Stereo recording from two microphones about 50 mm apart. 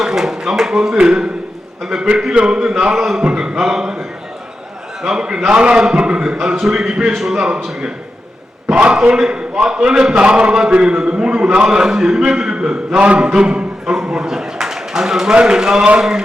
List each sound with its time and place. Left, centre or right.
0.0 s a sound: centre
1.9 s a man's voice: centre
2.9 s a man's voice: centre
5.0 s a man's voice: centre
6.3 s a man's voice: centre
8.7 s a man's voice: right
9.1 s a man's voice: centre